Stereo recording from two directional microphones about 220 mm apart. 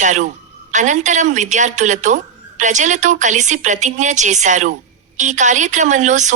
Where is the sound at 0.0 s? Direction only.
35° right (ahead or behind).